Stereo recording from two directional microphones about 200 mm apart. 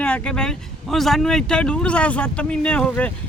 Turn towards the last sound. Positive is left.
turn(degrees=5)  # may be behind; listen again after turning